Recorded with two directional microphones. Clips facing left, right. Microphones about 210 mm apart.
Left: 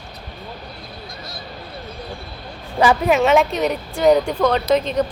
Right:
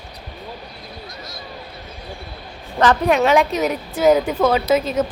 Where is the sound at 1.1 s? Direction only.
30° left (ahead or behind).